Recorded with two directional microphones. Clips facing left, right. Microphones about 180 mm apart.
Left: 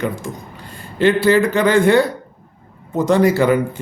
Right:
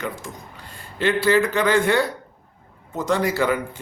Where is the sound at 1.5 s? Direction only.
20° left (ahead or behind).